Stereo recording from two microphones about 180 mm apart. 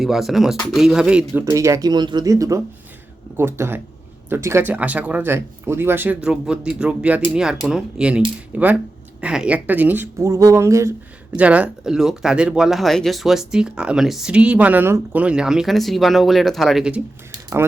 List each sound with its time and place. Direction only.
0.0 s a woman's voice: centre (ahead or behind)